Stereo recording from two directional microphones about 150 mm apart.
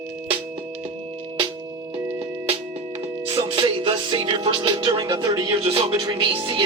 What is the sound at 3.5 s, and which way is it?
Music, 35° right (ahead or behind).